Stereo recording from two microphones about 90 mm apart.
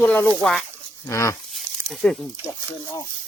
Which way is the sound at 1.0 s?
30° left (ahead or behind).